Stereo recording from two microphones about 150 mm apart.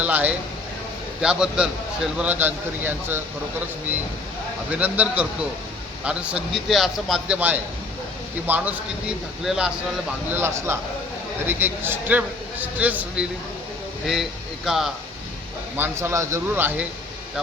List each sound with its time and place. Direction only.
0.0 s a man's voice: 10° right (ahead or behind)
4.7 s a man's voice: 10° right (ahead or behind)
10.2 s a man's voice: 15° right (ahead or behind)
15.8 s a man's voice: 20° right (ahead or behind)